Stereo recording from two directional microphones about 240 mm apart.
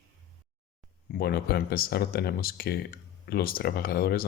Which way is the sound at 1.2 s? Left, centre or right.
Left.